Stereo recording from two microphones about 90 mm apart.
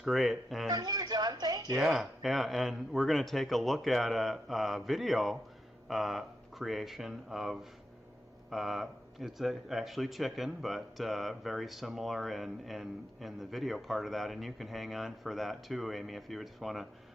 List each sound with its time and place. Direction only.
0.0 s speech: centre (ahead or behind)
0.7 s speech: 45° right (ahead or behind)
1.7 s speech: 5° right (ahead or behind)